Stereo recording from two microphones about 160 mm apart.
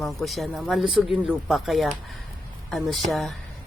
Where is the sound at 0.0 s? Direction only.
Centre (ahead or behind).